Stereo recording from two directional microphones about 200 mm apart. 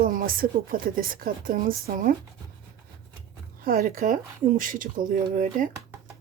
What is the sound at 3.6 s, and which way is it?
Speech, 45° right (ahead or behind).